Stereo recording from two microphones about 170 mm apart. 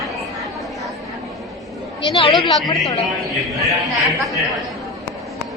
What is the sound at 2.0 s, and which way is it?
Speech, 30° left (ahead or behind).